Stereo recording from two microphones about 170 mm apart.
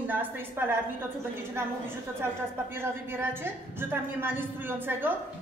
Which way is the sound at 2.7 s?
15° right (ahead or behind).